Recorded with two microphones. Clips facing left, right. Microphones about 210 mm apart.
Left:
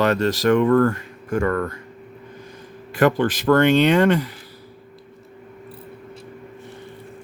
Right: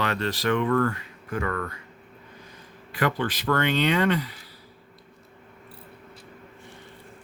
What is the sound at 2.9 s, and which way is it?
Speech, 45° left (ahead or behind).